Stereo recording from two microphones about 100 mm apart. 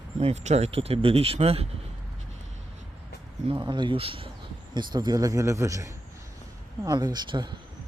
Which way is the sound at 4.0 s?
65° right (ahead or behind).